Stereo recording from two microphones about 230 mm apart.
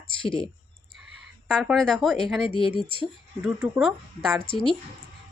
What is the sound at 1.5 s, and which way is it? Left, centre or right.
Speech, centre.